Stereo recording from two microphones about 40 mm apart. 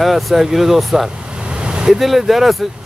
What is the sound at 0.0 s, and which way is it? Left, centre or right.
Speech, centre.